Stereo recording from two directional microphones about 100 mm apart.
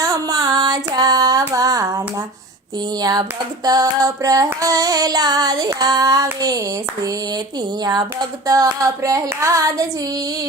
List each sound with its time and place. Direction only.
0.0 s a sound: 35° right (ahead or behind)
3.0 s female singing: 40° right (ahead or behind)
7.9 s female singing: 40° right (ahead or behind)